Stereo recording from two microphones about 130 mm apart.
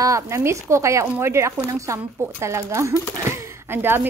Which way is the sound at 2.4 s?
20° right (ahead or behind).